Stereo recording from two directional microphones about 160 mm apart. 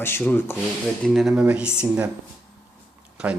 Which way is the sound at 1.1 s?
5° right (ahead or behind).